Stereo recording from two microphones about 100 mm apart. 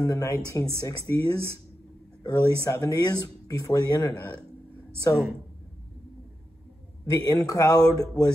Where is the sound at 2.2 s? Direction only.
35° left (ahead or behind).